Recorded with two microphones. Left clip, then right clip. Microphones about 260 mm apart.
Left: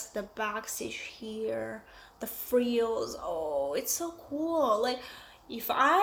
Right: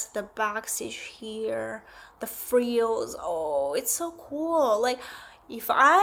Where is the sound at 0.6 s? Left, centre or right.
Centre.